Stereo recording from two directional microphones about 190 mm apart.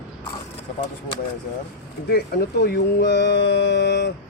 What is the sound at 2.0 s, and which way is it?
Speech, 60° left (ahead or behind).